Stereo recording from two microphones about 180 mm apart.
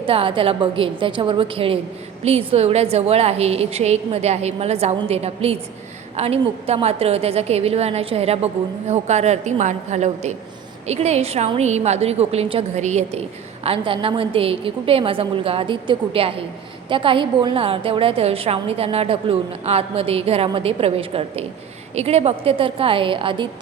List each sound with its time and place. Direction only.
0.0 s a woman's voice: 30° right (ahead or behind)